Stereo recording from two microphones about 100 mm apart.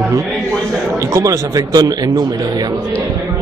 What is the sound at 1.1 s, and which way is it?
A man's voice, 35° right (ahead or behind).